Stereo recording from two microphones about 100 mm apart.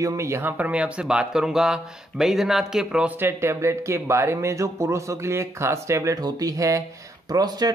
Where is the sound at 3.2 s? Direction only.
25° right (ahead or behind); by 7.7 s 40° right (ahead or behind).